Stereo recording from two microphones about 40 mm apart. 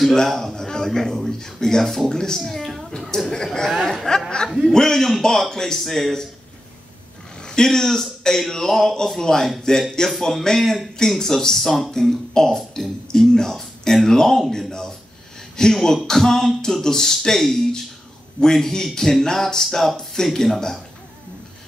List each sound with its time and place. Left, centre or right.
0.0 s a man's voice: centre
3.1 s a man's voice: centre
7.4 s a man's voice: centre